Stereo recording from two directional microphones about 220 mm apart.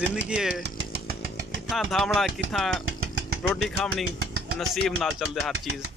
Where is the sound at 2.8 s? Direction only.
65° right (ahead or behind).